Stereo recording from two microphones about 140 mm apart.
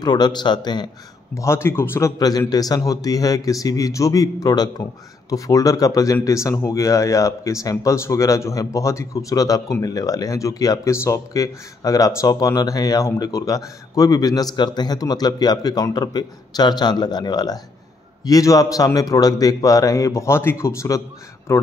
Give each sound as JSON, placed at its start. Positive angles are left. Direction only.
{"t": 0.0, "sound": "a man's voice", "side_deg": 30}
{"t": 1.3, "sound": "speech", "side_deg": 20}